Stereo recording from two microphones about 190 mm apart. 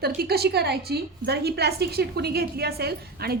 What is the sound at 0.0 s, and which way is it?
A woman's voice, 55° right (ahead or behind).